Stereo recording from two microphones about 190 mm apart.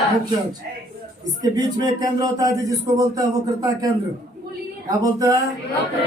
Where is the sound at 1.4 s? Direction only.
20° right (ahead or behind).